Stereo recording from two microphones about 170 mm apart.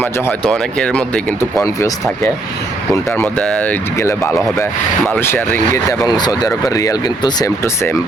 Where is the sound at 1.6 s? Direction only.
20° left (ahead or behind).